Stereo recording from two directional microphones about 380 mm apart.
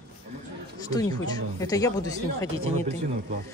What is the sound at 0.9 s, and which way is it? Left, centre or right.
Speech, centre.